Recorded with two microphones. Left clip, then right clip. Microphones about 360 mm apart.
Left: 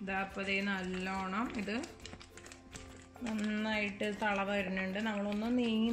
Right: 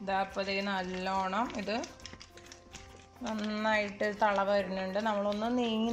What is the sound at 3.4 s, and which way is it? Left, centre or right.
Speech, right.